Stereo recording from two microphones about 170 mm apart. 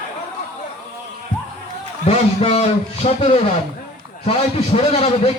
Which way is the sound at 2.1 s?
35° left (ahead or behind).